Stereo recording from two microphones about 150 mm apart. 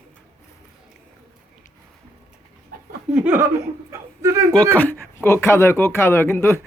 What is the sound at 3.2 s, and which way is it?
Speech, 10° right (ahead or behind).